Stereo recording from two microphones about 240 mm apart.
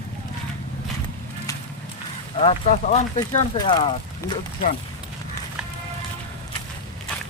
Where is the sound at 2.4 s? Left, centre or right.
Left.